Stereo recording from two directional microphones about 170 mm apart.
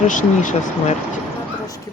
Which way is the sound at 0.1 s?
50° left (ahead or behind).